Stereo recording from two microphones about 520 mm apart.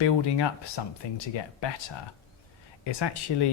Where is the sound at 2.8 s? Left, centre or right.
Left.